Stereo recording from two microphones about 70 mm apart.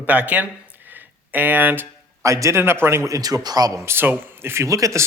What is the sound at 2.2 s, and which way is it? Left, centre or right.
Speech, right.